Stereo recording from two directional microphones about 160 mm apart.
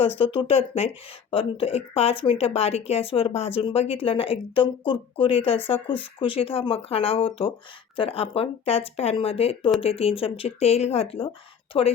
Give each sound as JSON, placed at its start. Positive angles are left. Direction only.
{"t": 0.2, "sound": "speech", "side_deg": 35}